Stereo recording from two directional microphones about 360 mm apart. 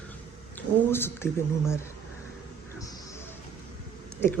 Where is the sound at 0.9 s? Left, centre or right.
Centre.